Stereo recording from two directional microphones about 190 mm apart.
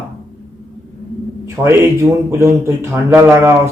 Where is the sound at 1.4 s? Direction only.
15° right (ahead or behind).